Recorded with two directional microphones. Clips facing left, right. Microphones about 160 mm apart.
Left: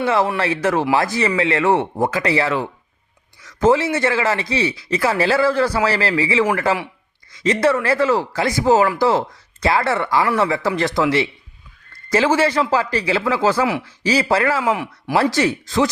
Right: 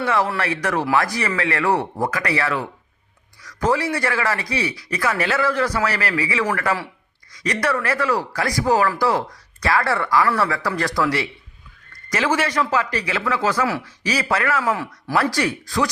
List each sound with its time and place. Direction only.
0.0 s speech: 25° left (ahead or behind)
14.6 s speech: 15° left (ahead or behind)